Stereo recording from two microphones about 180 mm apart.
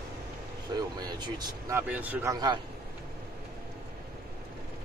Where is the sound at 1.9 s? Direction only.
10° right (ahead or behind).